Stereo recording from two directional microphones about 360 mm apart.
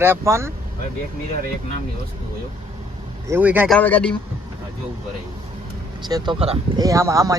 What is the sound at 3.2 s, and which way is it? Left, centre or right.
Speech, centre.